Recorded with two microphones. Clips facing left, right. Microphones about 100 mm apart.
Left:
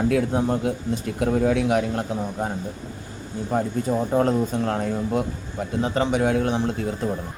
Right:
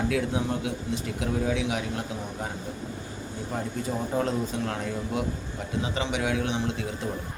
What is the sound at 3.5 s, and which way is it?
A man's voice, 45° left (ahead or behind).